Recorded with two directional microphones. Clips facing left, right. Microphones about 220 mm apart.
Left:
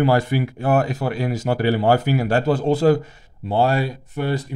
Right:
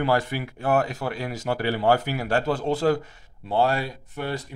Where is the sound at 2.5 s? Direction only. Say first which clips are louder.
Left 6 dB; 40° left (ahead or behind).